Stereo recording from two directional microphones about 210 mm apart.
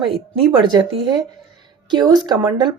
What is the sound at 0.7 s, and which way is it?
Speech, 20° right (ahead or behind).